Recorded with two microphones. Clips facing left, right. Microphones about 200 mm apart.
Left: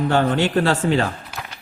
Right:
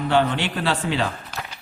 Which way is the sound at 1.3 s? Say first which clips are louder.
Even; 10° left (ahead or behind).